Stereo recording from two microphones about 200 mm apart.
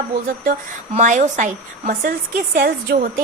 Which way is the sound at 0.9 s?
35° right (ahead or behind).